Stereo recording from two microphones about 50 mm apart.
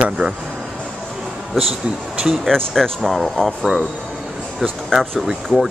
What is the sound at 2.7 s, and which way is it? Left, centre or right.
Speech, centre.